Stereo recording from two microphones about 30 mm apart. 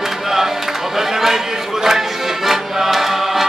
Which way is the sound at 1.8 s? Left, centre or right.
Centre.